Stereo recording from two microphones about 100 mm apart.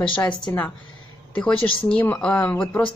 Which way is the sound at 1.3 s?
15° left (ahead or behind).